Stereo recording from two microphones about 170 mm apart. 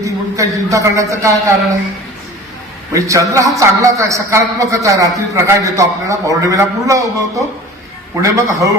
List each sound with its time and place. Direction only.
0.0 s a man's voice: 20° right (ahead or behind)
2.9 s a man's voice: 20° right (ahead or behind)